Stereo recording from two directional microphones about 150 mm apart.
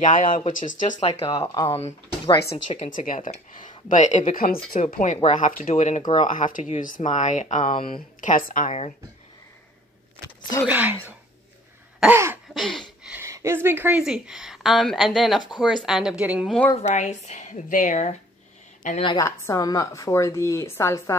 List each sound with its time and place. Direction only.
0.0 s speech: 60° left (ahead or behind)
1.3 s a woman's voice: 25° left (ahead or behind)
2.7 s speech: 50° left (ahead or behind)
4.3 s speech: 80° left
4.9 s a woman's voice: 50° left (ahead or behind)
10.7 s speech: 10° right (ahead or behind)
12.5 s a woman's voice: centre (ahead or behind)
13.2 s a woman's voice: 20° right (ahead or behind)
16.4 s a woman's voice: 10° left (ahead or behind)
16.7 s a woman's voice: 50° left (ahead or behind)
19.1 s a woman's voice: 20° left (ahead or behind)